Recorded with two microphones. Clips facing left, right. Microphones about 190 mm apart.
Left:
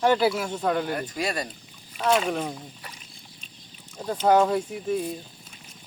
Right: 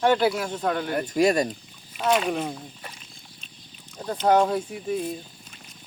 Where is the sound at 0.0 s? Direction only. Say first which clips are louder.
Even; 5° left (ahead or behind).